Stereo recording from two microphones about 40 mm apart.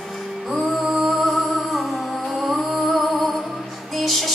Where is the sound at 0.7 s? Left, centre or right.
Centre.